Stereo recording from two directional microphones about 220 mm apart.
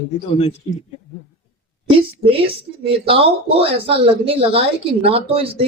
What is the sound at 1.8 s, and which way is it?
Speech, 25° right (ahead or behind).